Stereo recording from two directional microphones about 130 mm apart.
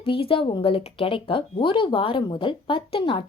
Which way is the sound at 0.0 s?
45° left (ahead or behind).